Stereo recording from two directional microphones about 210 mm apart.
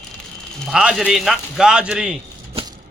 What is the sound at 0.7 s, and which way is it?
Speech, 5° right (ahead or behind).